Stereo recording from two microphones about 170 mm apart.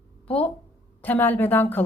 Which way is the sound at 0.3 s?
10° left (ahead or behind).